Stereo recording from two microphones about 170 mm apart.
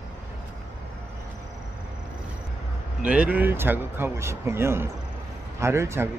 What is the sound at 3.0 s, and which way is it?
Speech, 5° right (ahead or behind).